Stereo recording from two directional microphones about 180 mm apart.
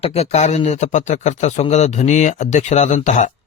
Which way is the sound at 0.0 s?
35° left (ahead or behind).